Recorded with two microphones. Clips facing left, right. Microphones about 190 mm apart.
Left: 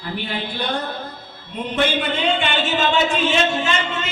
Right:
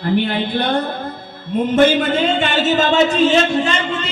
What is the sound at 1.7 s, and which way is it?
Speech, 45° right (ahead or behind).